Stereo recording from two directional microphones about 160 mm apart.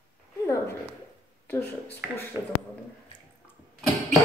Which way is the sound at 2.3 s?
15° right (ahead or behind).